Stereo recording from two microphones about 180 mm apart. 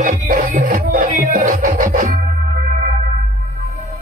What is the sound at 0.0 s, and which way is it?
Music, 45° right (ahead or behind).